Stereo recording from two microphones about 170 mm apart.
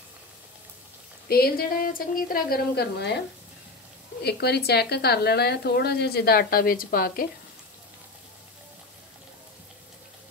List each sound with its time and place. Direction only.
1.3 s a woman's voice: 60° left (ahead or behind)
4.2 s speech: 75° left (ahead or behind); by 7.2 s 60° left (ahead or behind)